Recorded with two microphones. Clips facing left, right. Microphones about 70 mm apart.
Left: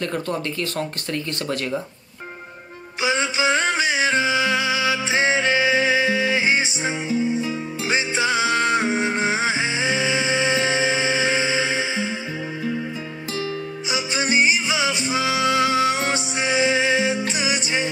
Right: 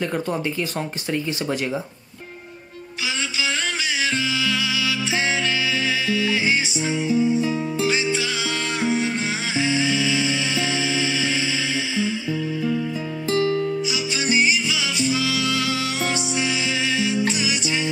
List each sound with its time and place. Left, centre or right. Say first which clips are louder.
0.0 s speech: right 1 dB; centre
3.1 s music: left 6 dB; left
14.3 s music: left 1 dB; left